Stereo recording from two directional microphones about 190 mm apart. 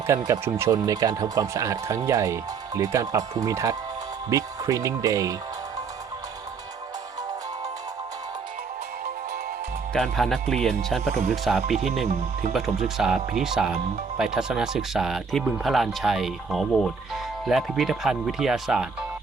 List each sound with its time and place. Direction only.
0.1 s speech: 15° right (ahead or behind)
9.9 s speech: centre (ahead or behind)